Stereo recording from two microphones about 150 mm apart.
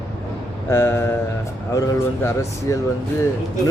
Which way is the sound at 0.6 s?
15° left (ahead or behind).